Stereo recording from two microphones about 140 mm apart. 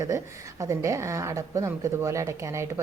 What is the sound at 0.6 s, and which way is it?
A woman's voice, 20° right (ahead or behind).